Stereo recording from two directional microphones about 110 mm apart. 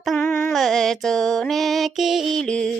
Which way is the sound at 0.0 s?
5° left (ahead or behind).